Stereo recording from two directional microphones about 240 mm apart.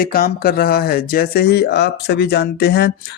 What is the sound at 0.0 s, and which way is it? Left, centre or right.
Speech, left.